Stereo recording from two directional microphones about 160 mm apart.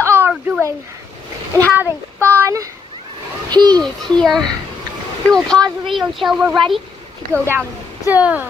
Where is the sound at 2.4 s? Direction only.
20° right (ahead or behind).